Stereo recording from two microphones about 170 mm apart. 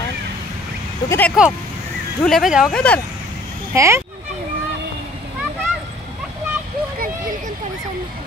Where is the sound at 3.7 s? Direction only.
15° right (ahead or behind).